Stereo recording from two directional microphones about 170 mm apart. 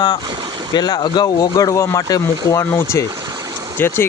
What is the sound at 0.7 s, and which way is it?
Speech, 25° left (ahead or behind).